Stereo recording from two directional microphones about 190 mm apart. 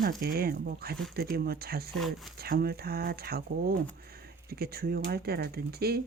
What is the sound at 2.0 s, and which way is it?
Speech, centre (ahead or behind).